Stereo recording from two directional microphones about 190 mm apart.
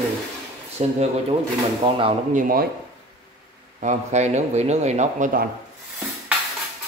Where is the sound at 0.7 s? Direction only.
35° right (ahead or behind).